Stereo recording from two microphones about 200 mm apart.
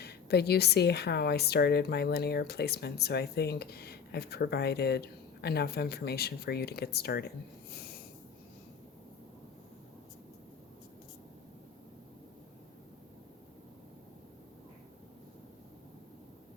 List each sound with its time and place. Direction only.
0.0 s speech: 55° left (ahead or behind)
7.7 s snort: 50° left (ahead or behind)